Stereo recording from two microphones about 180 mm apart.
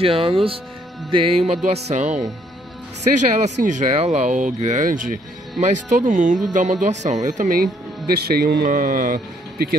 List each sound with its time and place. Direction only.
0.0 s music: 30° right (ahead or behind)
3.0 s speech: 40° right (ahead or behind)
8.1 s speech: 60° right (ahead or behind)
8.6 s speech: 50° right (ahead or behind)